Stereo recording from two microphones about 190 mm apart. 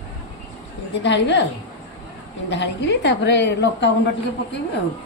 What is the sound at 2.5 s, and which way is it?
A woman's voice, 65° left (ahead or behind).